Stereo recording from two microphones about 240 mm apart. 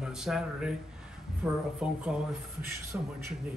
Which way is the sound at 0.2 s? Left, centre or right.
Centre.